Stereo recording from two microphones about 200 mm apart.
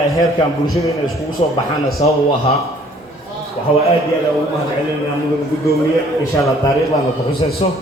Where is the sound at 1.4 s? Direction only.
30° left (ahead or behind).